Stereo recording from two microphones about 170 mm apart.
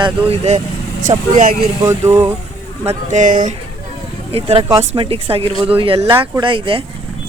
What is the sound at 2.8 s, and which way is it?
Speech, 45° right (ahead or behind).